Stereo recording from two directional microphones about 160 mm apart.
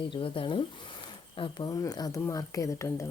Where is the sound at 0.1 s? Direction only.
30° left (ahead or behind).